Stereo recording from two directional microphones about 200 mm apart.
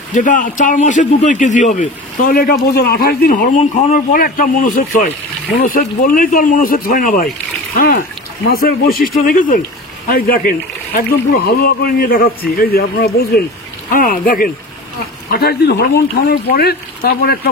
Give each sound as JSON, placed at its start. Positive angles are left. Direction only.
{"t": 0.1, "sound": "a man's voice", "side_deg": 40}
{"t": 15.2, "sound": "a man's voice", "side_deg": 55}